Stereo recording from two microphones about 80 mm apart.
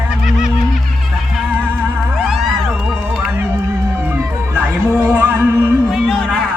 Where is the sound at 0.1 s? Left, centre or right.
Centre.